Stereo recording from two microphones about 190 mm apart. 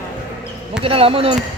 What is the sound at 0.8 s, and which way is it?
Speech, 30° right (ahead or behind).